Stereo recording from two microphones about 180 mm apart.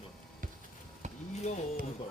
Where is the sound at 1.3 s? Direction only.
40° left (ahead or behind).